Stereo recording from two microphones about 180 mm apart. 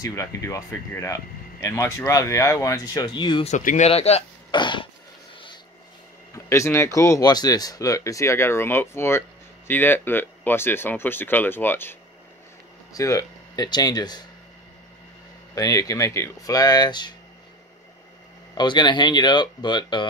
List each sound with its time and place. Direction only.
0.0 s speech: 20° left (ahead or behind)
3.4 s speech: 40° left (ahead or behind); by 4.8 s 25° left (ahead or behind)
6.3 s speech: 15° left (ahead or behind)
15.5 s speech: 20° left (ahead or behind)
18.5 s speech: 25° left (ahead or behind)